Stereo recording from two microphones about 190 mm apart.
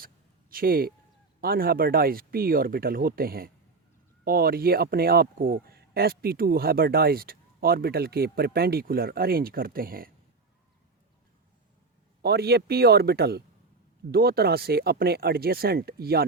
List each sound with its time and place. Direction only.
0.5 s speech: 50° right (ahead or behind)
12.2 s speech: 60° right (ahead or behind)